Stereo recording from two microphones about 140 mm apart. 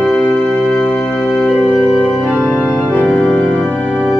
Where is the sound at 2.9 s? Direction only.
5° left (ahead or behind).